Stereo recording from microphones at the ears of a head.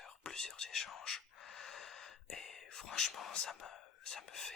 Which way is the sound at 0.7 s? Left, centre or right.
Left.